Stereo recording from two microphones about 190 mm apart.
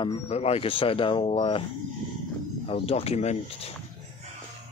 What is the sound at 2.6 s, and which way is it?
Speech, 30° left (ahead or behind).